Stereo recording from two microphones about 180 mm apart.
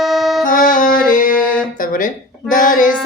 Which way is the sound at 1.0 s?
50° left (ahead or behind).